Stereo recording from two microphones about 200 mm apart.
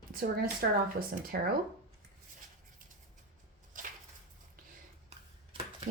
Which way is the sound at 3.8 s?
40° right (ahead or behind).